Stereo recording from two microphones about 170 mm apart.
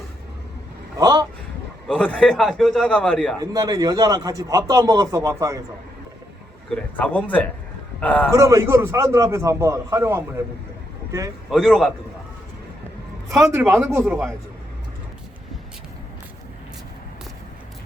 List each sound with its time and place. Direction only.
0.9 s speech: 20° right (ahead or behind)
1.9 s a man's voice: 5° left (ahead or behind)
3.4 s a man's voice: 20° right (ahead or behind)
6.7 s a man's voice: 5° left (ahead or behind)
8.3 s a man's voice: 15° right (ahead or behind)
11.5 s a man's voice: centre (ahead or behind)
13.3 s a man's voice: 15° right (ahead or behind)